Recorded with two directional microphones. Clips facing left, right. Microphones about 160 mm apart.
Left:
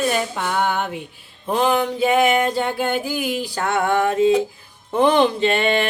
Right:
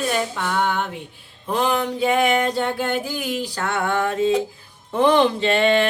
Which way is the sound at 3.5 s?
20° left (ahead or behind).